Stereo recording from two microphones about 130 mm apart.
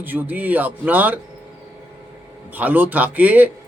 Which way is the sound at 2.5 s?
15° right (ahead or behind).